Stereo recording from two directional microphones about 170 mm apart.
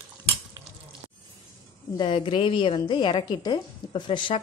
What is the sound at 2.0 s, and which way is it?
A woman's voice, 30° left (ahead or behind).